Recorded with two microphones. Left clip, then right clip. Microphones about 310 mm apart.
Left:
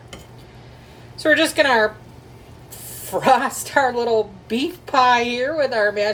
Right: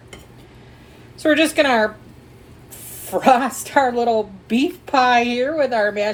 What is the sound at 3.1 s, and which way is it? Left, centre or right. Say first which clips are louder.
A woman's voice: right 1 dB; right.